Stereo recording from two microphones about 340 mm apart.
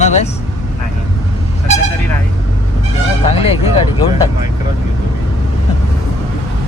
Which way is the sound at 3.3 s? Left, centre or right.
Centre.